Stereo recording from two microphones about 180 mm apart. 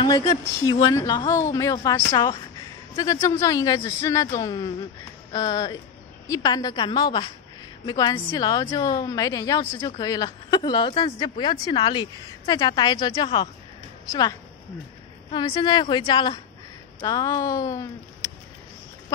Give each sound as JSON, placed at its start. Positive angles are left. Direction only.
{"t": 0.0, "sound": "a woman's voice", "side_deg": 25}
{"t": 15.3, "sound": "a woman's voice", "side_deg": 25}